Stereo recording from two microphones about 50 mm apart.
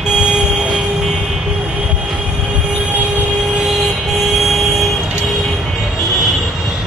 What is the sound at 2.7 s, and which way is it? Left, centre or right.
Train, right.